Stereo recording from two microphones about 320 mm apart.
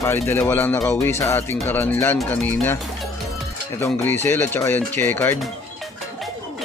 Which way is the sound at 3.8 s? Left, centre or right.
Centre.